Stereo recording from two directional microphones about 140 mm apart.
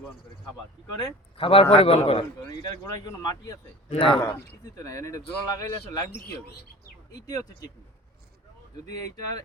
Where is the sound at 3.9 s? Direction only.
40° left (ahead or behind).